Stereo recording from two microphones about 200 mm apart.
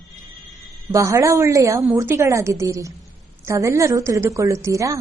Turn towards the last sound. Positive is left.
turn(degrees=-15)  # may be behind; listen again after turning